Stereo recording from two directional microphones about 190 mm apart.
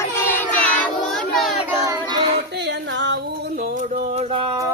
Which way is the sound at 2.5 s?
65° right (ahead or behind).